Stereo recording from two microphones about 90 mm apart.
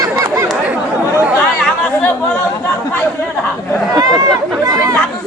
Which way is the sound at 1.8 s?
20° left (ahead or behind).